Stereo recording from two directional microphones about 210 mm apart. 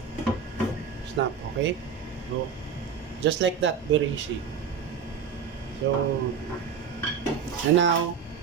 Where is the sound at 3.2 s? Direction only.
60° right (ahead or behind).